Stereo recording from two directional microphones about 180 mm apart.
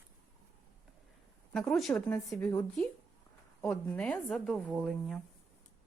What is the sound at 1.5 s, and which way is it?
A woman's voice, centre (ahead or behind).